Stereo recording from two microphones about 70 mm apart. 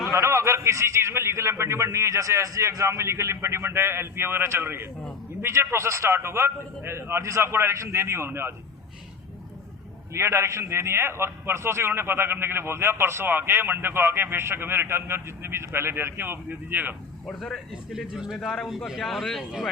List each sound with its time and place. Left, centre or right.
0.2 s a man's voice: right
10.2 s a man's voice: right
17.2 s speech: centre
17.9 s speech: centre
18.3 s speech: centre